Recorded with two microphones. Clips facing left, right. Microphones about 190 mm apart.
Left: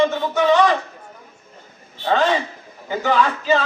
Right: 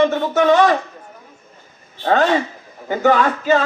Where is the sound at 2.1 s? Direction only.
55° right (ahead or behind).